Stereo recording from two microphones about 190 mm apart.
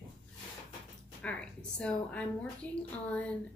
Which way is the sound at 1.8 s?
5° left (ahead or behind).